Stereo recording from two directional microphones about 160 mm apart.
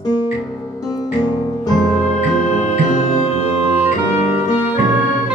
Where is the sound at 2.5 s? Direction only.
45° left (ahead or behind).